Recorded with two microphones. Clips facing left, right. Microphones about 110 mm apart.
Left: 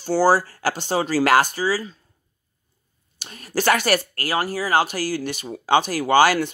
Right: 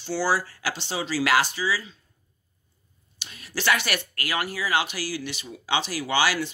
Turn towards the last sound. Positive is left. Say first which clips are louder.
# left 8 dB
turn(degrees=50)  # may be behind; listen again after turning